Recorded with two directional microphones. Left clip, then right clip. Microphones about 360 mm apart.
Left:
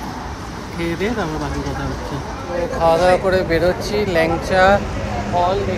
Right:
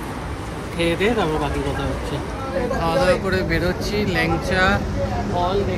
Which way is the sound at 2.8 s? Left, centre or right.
Centre.